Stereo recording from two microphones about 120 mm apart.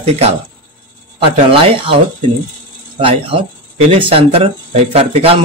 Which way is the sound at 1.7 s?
50° right (ahead or behind).